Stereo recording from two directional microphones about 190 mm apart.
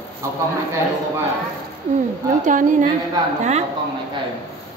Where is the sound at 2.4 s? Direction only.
45° right (ahead or behind).